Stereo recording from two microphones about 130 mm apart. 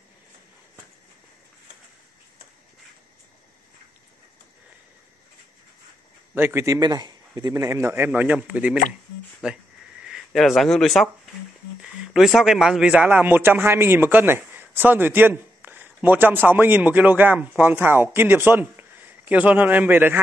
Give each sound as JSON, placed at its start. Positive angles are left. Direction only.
{"t": 6.3, "sound": "a man's voice", "side_deg": -20}